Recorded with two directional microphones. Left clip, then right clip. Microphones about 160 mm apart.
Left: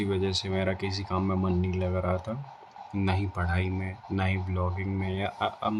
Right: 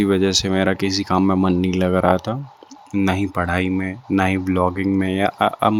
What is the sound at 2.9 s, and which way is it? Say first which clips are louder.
Speech: right 11 dB; 45° right (ahead or behind).